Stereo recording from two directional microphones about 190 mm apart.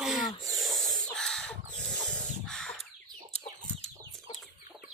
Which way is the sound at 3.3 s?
35° left (ahead or behind).